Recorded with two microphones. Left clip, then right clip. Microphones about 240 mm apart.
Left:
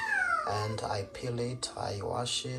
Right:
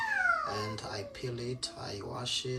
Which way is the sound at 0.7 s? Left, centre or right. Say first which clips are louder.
Left 5 dB; centre.